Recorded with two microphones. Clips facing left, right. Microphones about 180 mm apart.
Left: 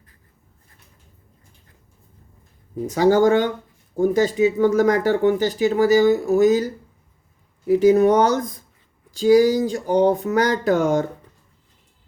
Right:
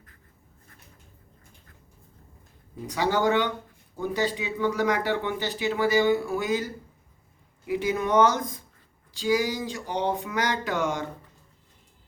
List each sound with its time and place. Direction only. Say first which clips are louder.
2.8 s speech: left 9 dB; 45° left (ahead or behind)
7.7 s speech: left 11 dB; 40° left (ahead or behind)